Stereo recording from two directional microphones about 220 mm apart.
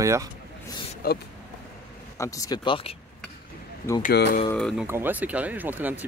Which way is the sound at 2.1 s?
15° left (ahead or behind).